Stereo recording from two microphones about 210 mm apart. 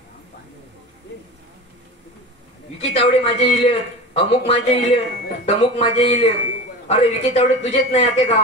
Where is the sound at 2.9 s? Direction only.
30° left (ahead or behind).